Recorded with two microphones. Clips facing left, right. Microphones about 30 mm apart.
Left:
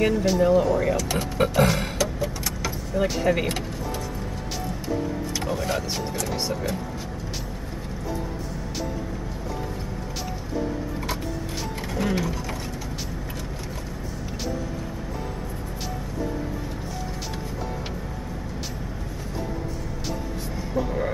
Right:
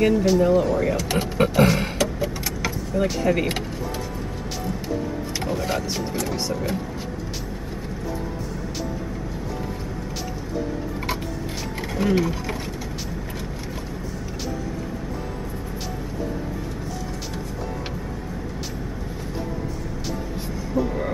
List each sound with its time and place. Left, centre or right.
0.0 s speech: centre
1.0 s speech: centre
1.5 s speech: centre
2.0 s vehicle: centre
2.9 s speech: centre
5.4 s speech: centre
12.0 s speech: centre
20.7 s vehicle: centre